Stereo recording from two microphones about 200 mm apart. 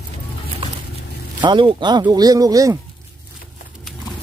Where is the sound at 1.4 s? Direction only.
25° right (ahead or behind).